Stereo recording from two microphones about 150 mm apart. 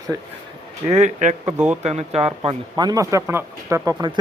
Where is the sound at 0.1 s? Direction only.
25° right (ahead or behind).